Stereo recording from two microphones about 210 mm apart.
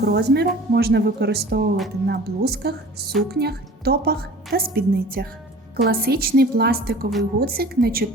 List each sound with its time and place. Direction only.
0.0 s speech: 50° right (ahead or behind)